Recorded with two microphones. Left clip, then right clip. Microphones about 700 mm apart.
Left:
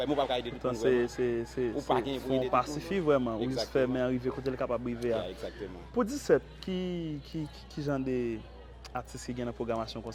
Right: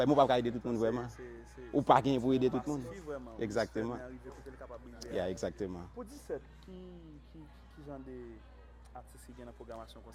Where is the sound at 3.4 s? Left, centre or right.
Right.